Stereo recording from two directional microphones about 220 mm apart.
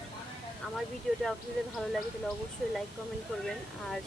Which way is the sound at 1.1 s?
Centre (ahead or behind).